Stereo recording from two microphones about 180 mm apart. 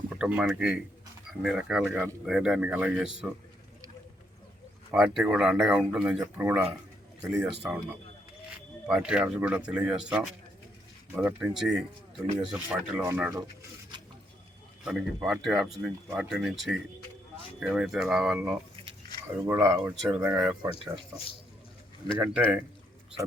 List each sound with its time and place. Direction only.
0.2 s speech: 5° right (ahead or behind)
1.9 s speech: 15° right (ahead or behind)
2.2 s speech: 5° right (ahead or behind)
4.9 s speech: 5° right (ahead or behind)
8.9 s speech: 5° right (ahead or behind)
13.3 s a sound: 20° right (ahead or behind)
14.8 s speech: 5° right (ahead or behind)
19.5 s speech: 15° right (ahead or behind)
22.0 s speech: 30° left (ahead or behind)